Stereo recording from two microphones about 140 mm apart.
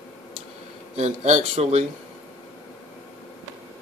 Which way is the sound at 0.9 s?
55° right (ahead or behind).